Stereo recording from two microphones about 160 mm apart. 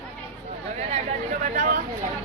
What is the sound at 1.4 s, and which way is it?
Speech, 55° right (ahead or behind).